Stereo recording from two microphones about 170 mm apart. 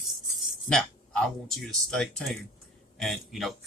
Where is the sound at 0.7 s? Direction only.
5° left (ahead or behind).